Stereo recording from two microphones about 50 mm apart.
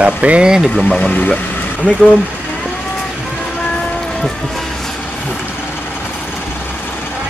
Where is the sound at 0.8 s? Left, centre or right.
Centre.